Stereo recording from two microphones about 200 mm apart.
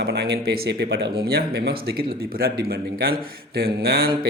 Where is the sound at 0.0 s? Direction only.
55° right (ahead or behind).